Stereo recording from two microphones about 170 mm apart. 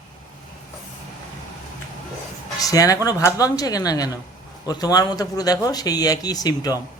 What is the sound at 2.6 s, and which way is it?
Speech, 20° left (ahead or behind).